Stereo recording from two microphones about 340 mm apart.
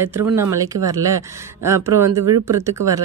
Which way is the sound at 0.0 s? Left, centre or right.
Centre.